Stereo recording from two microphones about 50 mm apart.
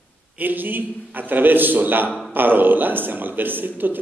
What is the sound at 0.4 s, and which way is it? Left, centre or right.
A man's voice, right.